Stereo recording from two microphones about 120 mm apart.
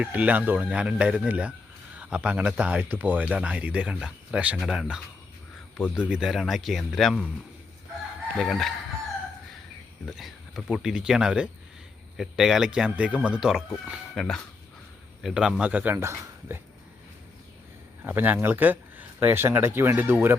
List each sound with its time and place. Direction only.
0.0 s speech: 10° right (ahead or behind)
8.4 s speech: centre (ahead or behind)
10.1 s speech: centre (ahead or behind)
14.2 s speech: 5° left (ahead or behind); by 16.6 s 25° right (ahead or behind)
18.0 s speech: 15° right (ahead or behind)